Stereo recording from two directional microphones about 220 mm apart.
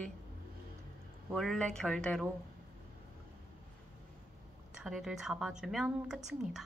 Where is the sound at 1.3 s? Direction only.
Centre (ahead or behind).